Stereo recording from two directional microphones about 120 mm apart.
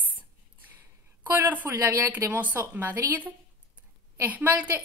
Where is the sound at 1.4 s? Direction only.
15° right (ahead or behind).